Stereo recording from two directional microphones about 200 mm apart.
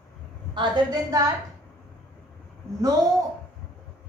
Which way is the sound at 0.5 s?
20° right (ahead or behind).